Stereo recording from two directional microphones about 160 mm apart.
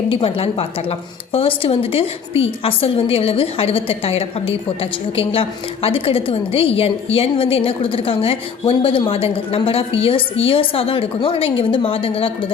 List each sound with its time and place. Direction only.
0.1 s a woman's voice: 35° left (ahead or behind)